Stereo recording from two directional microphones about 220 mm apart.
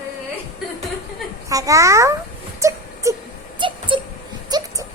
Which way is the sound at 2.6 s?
15° right (ahead or behind).